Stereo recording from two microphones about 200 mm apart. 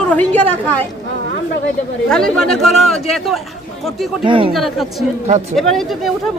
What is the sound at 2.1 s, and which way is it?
A woman's voice, 5° left (ahead or behind).